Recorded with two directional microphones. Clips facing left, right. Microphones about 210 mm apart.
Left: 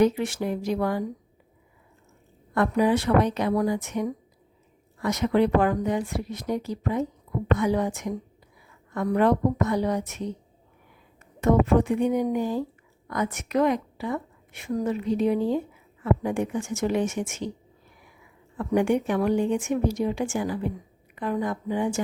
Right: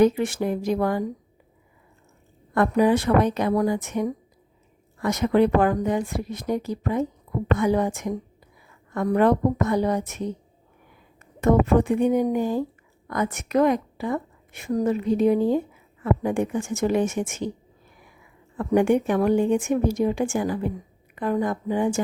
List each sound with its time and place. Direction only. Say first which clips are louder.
0.0 s a woman's voice: right 3 dB; 50° right (ahead or behind)
2.6 s a woman's voice: right 3 dB; 50° right (ahead or behind)
11.3 s a woman's voice: right 2 dB; 50° right (ahead or behind)
18.5 s a woman's voice: right 3 dB; 50° right (ahead or behind)